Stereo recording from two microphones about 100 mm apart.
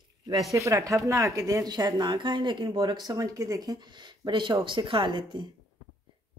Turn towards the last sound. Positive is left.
turn(degrees=-50)  # may be behind; listen again after turning